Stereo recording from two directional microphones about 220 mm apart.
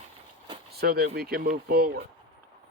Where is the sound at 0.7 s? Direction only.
45° right (ahead or behind).